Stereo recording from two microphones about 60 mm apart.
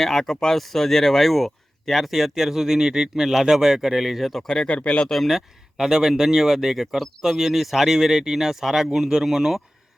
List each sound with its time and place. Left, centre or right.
0.0 s speech: centre
4.8 s speech: left
5.0 s speech: centre